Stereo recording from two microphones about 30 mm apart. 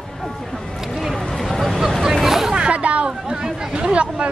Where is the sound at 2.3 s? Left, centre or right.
Centre.